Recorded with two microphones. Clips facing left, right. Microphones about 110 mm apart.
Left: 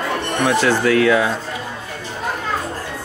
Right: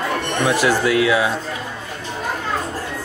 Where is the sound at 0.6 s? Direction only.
10° right (ahead or behind).